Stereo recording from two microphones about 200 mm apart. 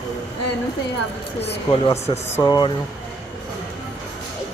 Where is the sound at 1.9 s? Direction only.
15° left (ahead or behind).